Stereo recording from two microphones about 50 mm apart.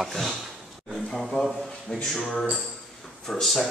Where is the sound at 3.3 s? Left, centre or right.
Centre.